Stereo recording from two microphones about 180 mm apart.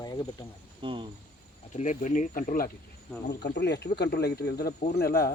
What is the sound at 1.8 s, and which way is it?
Speech, 40° left (ahead or behind).